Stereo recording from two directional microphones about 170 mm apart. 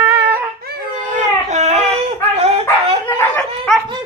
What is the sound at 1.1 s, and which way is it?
Dog, 45° right (ahead or behind).